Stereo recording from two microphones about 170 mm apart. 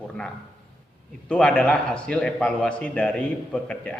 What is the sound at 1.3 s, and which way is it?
A man's voice, 5° left (ahead or behind).